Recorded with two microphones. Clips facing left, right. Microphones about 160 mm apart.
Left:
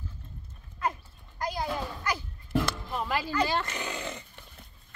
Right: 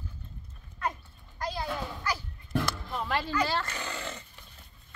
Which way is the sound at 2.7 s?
5° left (ahead or behind).